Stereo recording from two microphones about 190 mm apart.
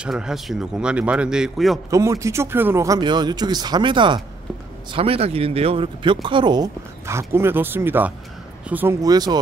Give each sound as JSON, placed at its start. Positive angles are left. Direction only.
{"t": 0.0, "sound": "a man's voice", "side_deg": -5}
{"t": 1.9, "sound": "speech", "side_deg": -15}